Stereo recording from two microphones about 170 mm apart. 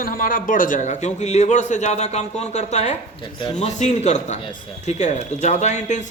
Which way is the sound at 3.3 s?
30° left (ahead or behind).